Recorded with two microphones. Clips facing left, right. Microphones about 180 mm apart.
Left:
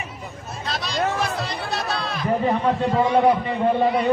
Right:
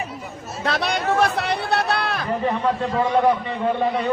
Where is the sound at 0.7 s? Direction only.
60° right (ahead or behind).